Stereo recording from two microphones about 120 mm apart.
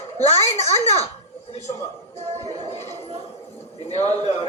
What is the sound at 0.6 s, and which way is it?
Speech, 65° left (ahead or behind).